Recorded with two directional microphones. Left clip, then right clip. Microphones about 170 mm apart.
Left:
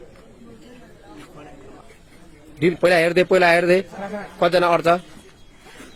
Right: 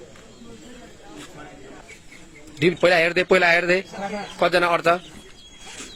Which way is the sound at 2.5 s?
Centre (ahead or behind).